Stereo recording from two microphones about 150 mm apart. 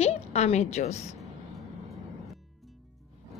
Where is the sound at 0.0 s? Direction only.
45° left (ahead or behind).